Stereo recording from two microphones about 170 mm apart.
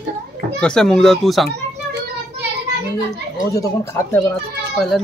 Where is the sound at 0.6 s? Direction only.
5° left (ahead or behind).